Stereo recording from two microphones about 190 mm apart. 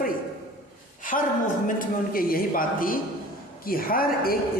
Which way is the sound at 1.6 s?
45° left (ahead or behind).